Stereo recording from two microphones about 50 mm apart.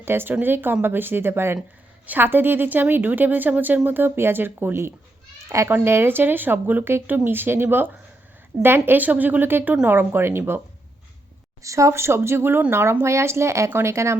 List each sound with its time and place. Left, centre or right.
0.0 s speech: right
2.0 s a woman's voice: right
9.0 s a woman's voice: right
11.6 s speech: right
12.7 s speech: right
13.7 s speech: right